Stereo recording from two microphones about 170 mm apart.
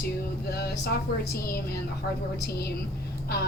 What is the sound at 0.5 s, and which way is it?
Speech, 70° left (ahead or behind).